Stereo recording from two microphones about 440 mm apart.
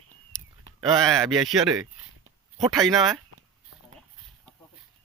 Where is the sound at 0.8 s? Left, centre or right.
Centre.